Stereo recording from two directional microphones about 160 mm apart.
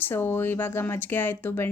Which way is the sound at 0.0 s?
15° left (ahead or behind).